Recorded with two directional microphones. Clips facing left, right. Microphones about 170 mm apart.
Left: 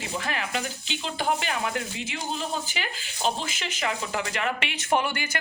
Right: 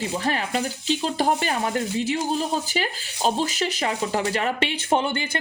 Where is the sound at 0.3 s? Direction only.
35° right (ahead or behind).